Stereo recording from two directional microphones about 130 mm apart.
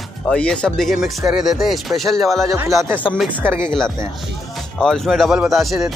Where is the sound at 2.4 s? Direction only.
25° right (ahead or behind).